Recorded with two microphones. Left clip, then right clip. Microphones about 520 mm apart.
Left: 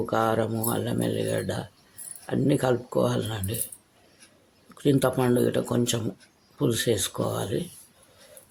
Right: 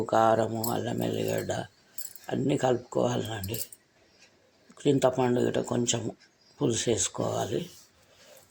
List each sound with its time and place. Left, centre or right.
0.0 s speech: left
4.8 s speech: left